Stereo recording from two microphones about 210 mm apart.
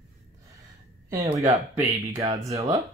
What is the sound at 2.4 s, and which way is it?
Speech, 15° right (ahead or behind).